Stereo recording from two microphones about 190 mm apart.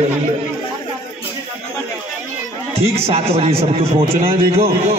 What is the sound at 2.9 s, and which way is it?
A man's voice, 30° right (ahead or behind).